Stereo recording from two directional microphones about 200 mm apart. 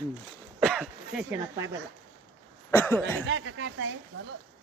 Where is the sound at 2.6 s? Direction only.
10° left (ahead or behind).